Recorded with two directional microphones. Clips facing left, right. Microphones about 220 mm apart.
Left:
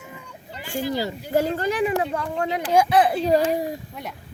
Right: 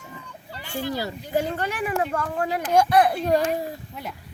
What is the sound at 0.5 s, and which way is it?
Speech, 15° left (ahead or behind).